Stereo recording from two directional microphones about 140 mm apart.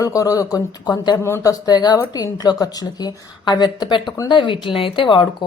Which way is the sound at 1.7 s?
30° left (ahead or behind).